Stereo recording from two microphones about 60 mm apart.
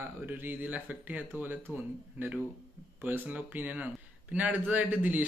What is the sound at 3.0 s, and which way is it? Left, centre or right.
A man's voice, right.